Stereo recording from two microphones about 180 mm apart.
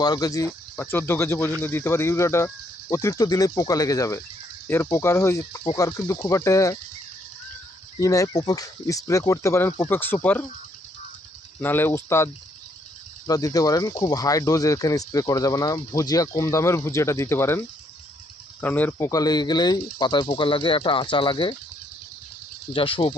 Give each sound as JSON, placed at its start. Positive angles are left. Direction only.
{"t": 0.0, "sound": "speech", "side_deg": 20}
{"t": 7.9, "sound": "speech", "side_deg": 20}
{"t": 11.6, "sound": "speech", "side_deg": 10}
{"t": 22.7, "sound": "speech", "side_deg": 30}